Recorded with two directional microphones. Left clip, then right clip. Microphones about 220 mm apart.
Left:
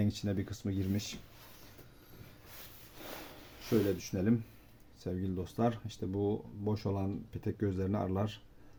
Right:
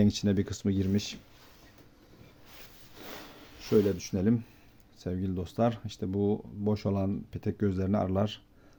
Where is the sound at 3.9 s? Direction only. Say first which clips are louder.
Right 4 dB; 45° right (ahead or behind).